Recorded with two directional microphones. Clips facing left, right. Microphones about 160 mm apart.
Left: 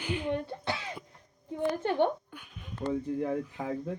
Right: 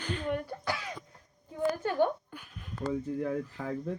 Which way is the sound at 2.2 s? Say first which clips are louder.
Even; centre (ahead or behind).